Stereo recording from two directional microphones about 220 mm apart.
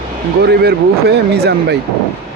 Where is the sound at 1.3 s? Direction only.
50° right (ahead or behind).